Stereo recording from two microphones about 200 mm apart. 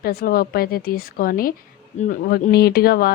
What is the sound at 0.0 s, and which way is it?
Speech, 50° left (ahead or behind).